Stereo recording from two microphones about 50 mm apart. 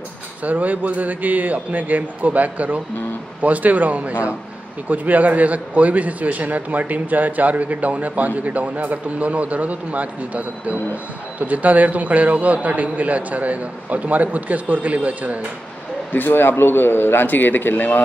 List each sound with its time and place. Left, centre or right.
0.4 s a man's voice: right
16.1 s speech: left